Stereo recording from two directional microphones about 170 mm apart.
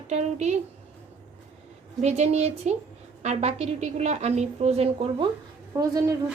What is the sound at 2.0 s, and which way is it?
A woman's voice, 40° right (ahead or behind).